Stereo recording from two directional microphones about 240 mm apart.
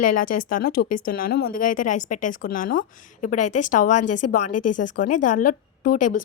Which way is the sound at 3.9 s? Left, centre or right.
Left.